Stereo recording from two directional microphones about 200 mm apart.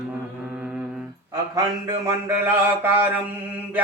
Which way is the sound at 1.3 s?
15° right (ahead or behind).